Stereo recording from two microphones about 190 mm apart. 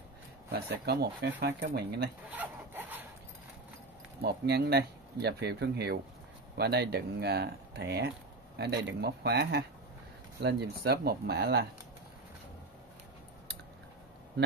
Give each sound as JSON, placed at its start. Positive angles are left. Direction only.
{"t": 0.5, "sound": "speech", "side_deg": -60}
{"t": 2.3, "sound": "rub", "side_deg": -10}
{"t": 4.2, "sound": "speech", "side_deg": -60}